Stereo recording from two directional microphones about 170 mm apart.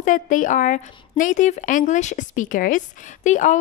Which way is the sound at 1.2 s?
50° left (ahead or behind).